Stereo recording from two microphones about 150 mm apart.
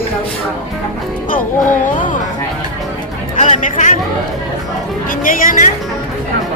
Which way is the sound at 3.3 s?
55° left (ahead or behind).